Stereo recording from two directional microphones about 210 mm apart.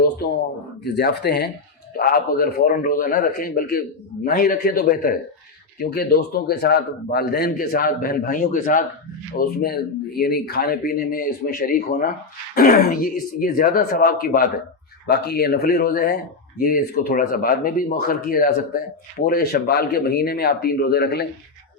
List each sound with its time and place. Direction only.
0.9 s a man's voice: 50° left (ahead or behind)